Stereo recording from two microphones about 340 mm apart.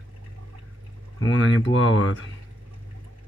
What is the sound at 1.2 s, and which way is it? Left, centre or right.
Speech, left.